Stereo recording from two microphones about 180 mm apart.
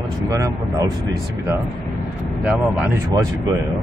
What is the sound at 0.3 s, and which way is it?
Speech, 20° right (ahead or behind).